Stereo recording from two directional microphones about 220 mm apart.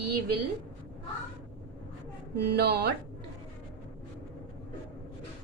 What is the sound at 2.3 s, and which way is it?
Speech, 50° right (ahead or behind).